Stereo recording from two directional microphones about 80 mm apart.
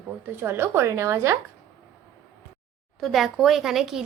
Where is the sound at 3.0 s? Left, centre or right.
Centre.